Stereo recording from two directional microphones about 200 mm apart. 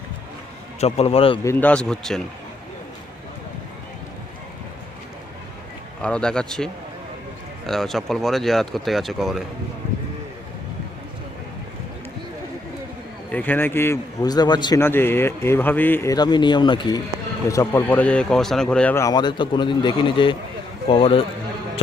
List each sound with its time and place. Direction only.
0.8 s a man's voice: 30° left (ahead or behind)
1.5 s speech: 10° left (ahead or behind)
6.0 s speech: 5° left (ahead or behind)
7.7 s speech: centre (ahead or behind)
13.3 s a man's voice: 10° left (ahead or behind); by 21.2 s 25° left (ahead or behind)